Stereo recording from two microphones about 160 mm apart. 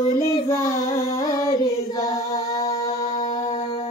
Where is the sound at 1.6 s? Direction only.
20° left (ahead or behind).